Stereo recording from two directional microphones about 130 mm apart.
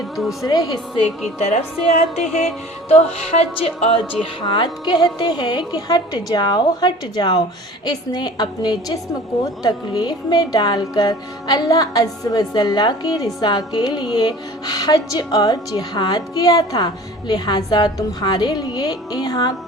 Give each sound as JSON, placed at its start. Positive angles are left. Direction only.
{"t": 0.4, "sound": "speech", "side_deg": 30}
{"t": 1.4, "sound": "speech", "side_deg": 65}
{"t": 2.9, "sound": "speech", "side_deg": 50}